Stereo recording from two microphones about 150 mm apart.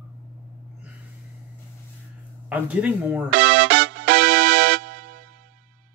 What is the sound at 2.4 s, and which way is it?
Speech, 10° right (ahead or behind).